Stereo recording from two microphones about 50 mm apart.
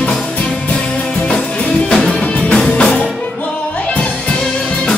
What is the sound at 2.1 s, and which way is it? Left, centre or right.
Music, left.